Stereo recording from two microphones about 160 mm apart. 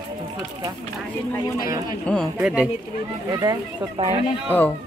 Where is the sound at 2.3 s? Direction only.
5° right (ahead or behind).